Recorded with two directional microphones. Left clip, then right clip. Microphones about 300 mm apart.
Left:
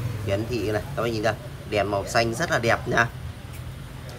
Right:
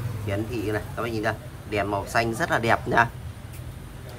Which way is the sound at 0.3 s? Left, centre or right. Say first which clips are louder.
Left 2 dB; centre.